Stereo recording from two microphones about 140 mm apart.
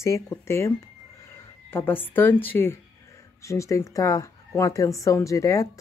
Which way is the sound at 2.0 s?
15° left (ahead or behind).